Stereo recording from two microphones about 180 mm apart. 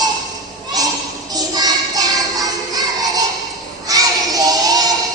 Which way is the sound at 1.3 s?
20° right (ahead or behind).